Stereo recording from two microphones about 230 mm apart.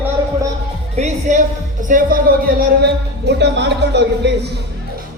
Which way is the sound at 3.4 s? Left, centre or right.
Right.